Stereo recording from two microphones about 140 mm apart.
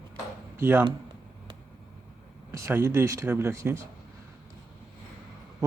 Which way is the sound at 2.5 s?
20° right (ahead or behind).